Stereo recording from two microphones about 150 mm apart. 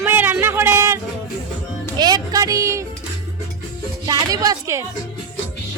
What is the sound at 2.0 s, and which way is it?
Music, 25° right (ahead or behind).